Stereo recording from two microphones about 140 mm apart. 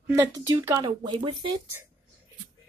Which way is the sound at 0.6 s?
25° right (ahead or behind).